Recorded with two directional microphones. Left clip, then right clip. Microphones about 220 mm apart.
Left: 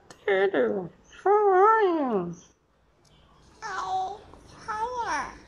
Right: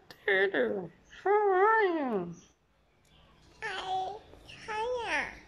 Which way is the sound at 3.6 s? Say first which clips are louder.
Left 4 dB; 25° right (ahead or behind).